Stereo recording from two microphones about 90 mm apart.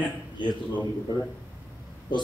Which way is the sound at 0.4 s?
60° left (ahead or behind).